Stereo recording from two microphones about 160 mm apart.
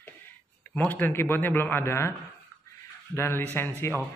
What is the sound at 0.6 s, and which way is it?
Speech, 10° left (ahead or behind).